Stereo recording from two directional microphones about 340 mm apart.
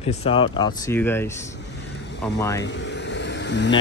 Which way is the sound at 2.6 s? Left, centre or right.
Left.